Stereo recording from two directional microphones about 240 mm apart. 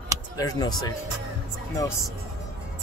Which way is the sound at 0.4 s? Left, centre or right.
Centre.